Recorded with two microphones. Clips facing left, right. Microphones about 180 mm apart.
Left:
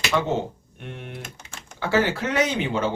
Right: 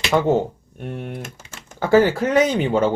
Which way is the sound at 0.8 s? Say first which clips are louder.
Right 7 dB; 45° right (ahead or behind).